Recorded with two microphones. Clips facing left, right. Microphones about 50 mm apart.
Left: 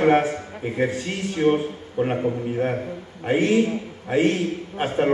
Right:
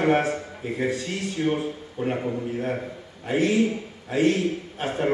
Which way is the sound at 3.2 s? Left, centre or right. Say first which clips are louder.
Left 2 dB; left.